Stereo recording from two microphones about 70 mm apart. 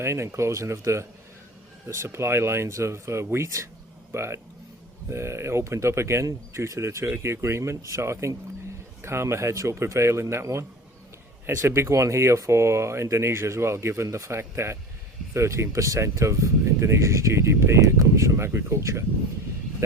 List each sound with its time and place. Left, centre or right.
0.0 s speech: right